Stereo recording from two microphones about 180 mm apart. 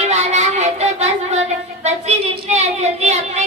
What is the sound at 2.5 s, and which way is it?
Child singing, 40° right (ahead or behind).